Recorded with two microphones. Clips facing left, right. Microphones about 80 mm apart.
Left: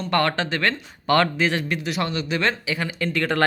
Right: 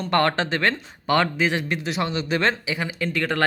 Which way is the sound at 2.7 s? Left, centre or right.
Centre.